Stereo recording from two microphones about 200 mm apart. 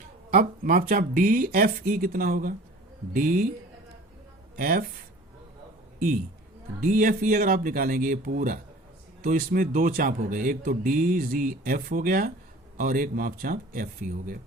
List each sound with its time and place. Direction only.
0.3 s speech: 45° right (ahead or behind)
4.5 s speech: 45° right (ahead or behind)
6.8 s speech: 45° right (ahead or behind)